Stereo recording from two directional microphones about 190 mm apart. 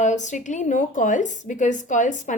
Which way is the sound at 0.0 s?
40° left (ahead or behind).